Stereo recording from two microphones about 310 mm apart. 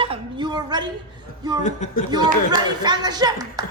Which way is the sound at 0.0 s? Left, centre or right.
Centre.